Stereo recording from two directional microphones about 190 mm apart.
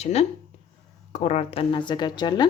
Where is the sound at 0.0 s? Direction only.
35° left (ahead or behind).